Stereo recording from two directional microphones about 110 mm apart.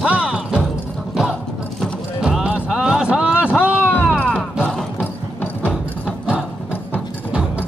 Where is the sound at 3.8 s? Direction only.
15° left (ahead or behind).